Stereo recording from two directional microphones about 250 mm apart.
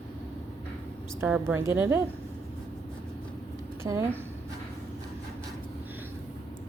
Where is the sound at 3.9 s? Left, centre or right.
Centre.